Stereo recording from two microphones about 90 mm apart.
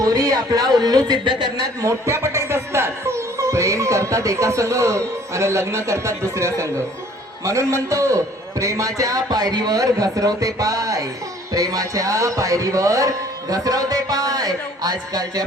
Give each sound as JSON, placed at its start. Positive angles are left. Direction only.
{"t": 0.0, "sound": "a man's voice", "side_deg": -45}
{"t": 1.9, "sound": "speech", "side_deg": -30}